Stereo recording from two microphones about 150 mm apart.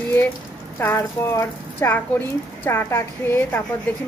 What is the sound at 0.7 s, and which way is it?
Speech, 20° left (ahead or behind).